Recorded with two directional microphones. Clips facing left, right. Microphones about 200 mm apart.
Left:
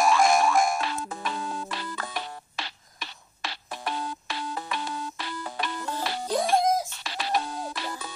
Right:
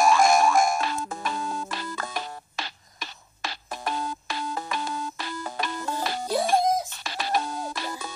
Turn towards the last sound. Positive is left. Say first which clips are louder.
# right 2 dB
turn(degrees=-45)  # may be behind; listen again after turning